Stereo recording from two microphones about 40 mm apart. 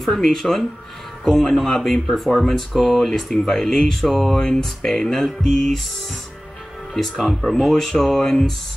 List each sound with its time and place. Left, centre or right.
0.0 s speech: centre
4.4 s speech: centre
6.9 s speech: centre